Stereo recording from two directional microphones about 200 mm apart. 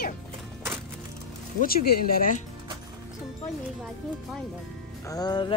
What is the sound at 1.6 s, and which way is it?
Speech, 50° left (ahead or behind).